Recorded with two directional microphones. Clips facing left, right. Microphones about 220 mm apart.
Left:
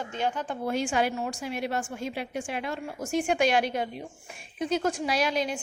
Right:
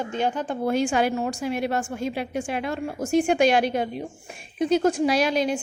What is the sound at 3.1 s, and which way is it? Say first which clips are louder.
A woman's voice: right 5 dB; 30° right (ahead or behind).